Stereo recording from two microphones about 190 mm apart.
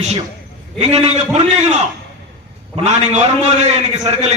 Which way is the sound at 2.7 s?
35° right (ahead or behind).